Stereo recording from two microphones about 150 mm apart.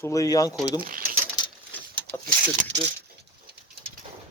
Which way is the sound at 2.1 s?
90° right.